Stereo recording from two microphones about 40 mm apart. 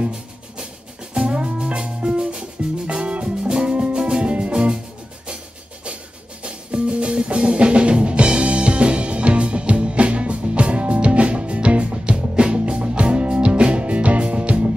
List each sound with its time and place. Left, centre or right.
1.1 s music: right
6.4 s music: right